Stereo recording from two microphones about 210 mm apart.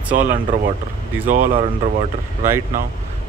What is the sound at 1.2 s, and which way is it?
Speech, 35° right (ahead or behind).